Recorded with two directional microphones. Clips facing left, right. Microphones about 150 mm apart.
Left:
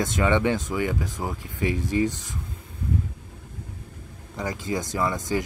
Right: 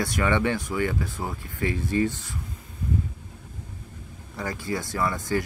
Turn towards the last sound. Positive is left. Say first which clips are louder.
# left 1 dB
turn(degrees=20)  # may be behind; listen again after turning